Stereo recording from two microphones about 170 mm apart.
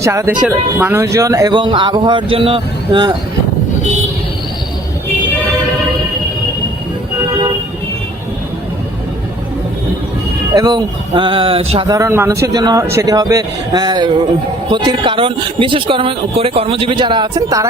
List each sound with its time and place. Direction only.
0.0 s speech: 15° right (ahead or behind)
10.5 s speech: 25° right (ahead or behind)
11.9 s speech: 20° right (ahead or behind)